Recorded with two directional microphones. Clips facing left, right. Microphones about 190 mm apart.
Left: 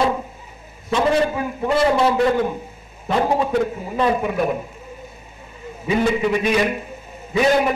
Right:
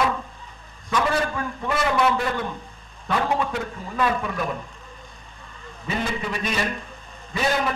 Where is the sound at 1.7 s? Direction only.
25° left (ahead or behind).